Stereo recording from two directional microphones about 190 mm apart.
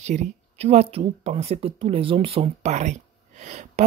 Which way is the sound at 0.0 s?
40° right (ahead or behind).